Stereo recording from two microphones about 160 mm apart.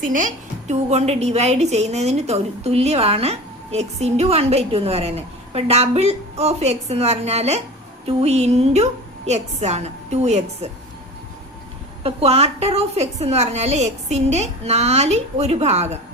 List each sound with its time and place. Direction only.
0.1 s a woman's voice: 55° right (ahead or behind)
12.0 s a woman's voice: 40° right (ahead or behind)